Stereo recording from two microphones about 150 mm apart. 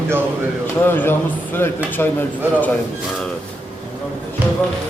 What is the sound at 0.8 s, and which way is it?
Speech, 15° left (ahead or behind).